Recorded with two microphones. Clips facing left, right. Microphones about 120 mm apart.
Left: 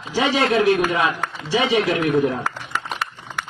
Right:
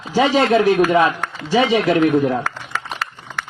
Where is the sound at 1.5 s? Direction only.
45° right (ahead or behind).